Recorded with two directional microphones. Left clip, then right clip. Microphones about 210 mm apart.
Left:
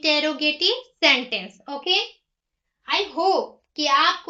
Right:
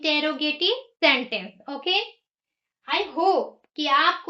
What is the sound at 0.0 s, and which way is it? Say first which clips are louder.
A woman's voice: left 3 dB; 15° left (ahead or behind).